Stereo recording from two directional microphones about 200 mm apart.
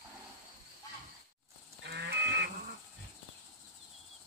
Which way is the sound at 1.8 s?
55° right (ahead or behind).